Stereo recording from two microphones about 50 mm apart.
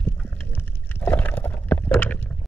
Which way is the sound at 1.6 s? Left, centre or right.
Left.